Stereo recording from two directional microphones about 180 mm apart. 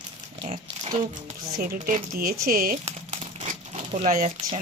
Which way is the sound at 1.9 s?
55° right (ahead or behind).